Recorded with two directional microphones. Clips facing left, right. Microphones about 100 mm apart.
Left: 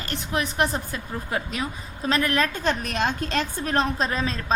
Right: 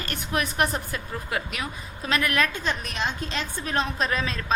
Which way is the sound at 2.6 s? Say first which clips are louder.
Left 4 dB; 50° left (ahead or behind).